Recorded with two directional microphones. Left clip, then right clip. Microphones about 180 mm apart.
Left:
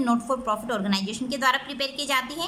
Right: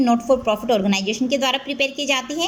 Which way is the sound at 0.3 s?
10° right (ahead or behind).